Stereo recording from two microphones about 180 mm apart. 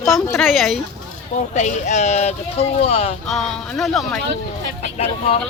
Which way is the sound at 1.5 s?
40° left (ahead or behind).